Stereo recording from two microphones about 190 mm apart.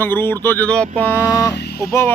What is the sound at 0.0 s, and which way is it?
Speech, 10° left (ahead or behind).